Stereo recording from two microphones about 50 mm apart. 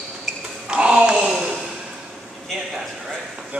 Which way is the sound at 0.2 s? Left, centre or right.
Centre.